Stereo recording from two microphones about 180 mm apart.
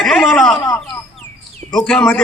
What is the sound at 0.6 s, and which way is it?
Speech, 15° left (ahead or behind).